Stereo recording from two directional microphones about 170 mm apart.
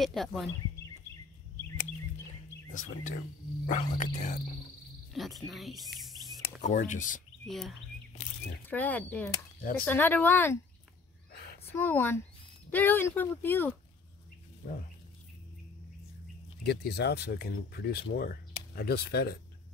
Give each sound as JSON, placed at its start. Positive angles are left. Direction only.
{"t": 0.0, "sound": "speech", "side_deg": 0}
{"t": 2.7, "sound": "speech", "side_deg": 45}
{"t": 5.1, "sound": "speech", "side_deg": 0}
{"t": 6.4, "sound": "speech", "side_deg": 45}
{"t": 7.4, "sound": "speech", "side_deg": 0}
{"t": 9.6, "sound": "speech", "side_deg": 55}
{"t": 9.8, "sound": "speech", "side_deg": 10}
{"t": 11.7, "sound": "speech", "side_deg": 10}
{"t": 16.6, "sound": "speech", "side_deg": 70}